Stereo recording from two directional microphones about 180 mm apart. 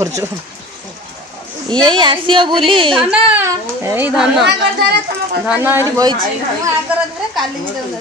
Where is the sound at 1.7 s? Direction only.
25° right (ahead or behind).